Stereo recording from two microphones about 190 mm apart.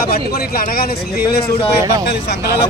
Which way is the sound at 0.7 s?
55° left (ahead or behind).